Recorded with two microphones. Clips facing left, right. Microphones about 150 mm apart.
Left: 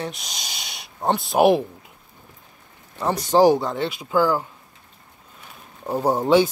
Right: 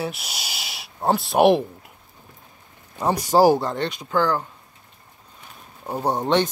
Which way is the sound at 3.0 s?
10° right (ahead or behind).